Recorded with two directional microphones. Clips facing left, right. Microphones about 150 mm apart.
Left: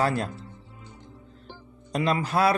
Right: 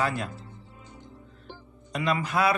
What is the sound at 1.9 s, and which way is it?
Speech, 30° left (ahead or behind).